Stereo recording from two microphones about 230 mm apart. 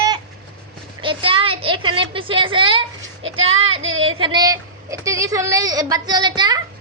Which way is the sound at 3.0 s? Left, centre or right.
Right.